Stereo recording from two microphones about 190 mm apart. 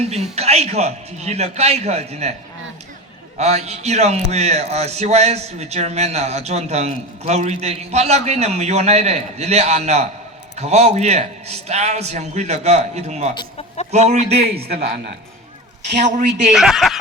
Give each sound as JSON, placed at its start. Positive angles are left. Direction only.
{"t": 0.0, "sound": "a man's voice", "side_deg": -35}
{"t": 3.3, "sound": "a man's voice", "side_deg": -35}
{"t": 15.9, "sound": "a man's voice", "side_deg": -40}
{"t": 16.5, "sound": "speech", "side_deg": -5}